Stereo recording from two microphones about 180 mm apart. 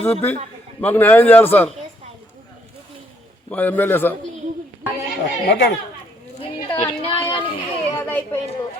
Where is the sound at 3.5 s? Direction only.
10° left (ahead or behind).